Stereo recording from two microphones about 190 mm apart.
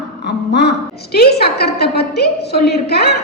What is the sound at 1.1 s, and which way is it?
A woman's voice, 55° left (ahead or behind).